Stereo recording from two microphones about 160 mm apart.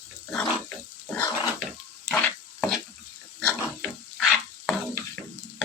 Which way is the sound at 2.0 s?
5° left (ahead or behind).